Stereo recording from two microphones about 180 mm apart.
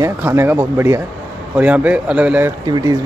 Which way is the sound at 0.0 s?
15° right (ahead or behind).